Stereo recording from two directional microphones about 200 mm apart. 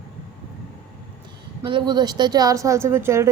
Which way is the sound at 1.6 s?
20° right (ahead or behind).